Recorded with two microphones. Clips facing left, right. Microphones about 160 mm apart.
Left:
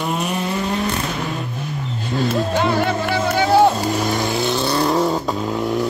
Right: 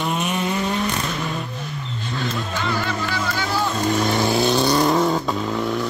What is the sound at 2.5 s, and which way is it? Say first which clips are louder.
Music: left 6 dB; 60° left (ahead or behind).